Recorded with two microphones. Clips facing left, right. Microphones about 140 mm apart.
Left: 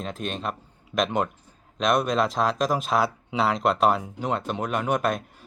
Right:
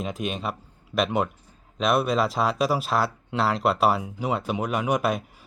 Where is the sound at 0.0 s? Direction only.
10° right (ahead or behind).